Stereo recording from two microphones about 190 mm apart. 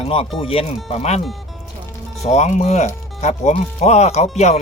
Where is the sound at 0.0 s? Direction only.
30° left (ahead or behind).